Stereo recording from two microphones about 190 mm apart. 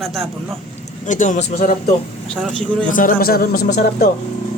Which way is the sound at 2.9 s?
45° left (ahead or behind).